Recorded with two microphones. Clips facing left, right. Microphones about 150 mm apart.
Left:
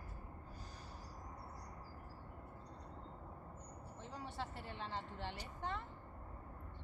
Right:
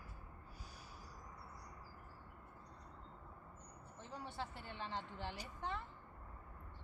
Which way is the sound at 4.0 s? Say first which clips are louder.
Even; centre (ahead or behind).